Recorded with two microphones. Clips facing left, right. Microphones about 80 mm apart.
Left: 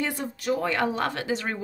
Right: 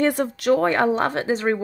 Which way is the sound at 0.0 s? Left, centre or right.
Right.